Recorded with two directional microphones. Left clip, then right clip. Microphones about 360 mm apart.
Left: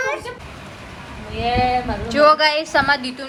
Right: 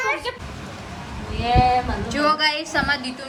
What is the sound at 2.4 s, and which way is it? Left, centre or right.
Speech, centre.